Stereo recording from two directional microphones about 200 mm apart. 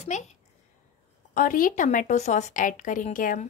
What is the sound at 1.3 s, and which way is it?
A woman's voice, 40° left (ahead or behind).